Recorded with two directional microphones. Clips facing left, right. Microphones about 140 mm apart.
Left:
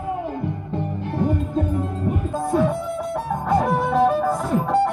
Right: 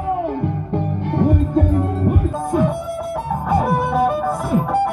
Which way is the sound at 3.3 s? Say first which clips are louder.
Right 2 dB; 10° right (ahead or behind).